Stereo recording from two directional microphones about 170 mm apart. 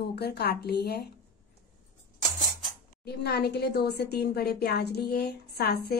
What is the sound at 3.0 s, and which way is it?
Speech, 70° left (ahead or behind).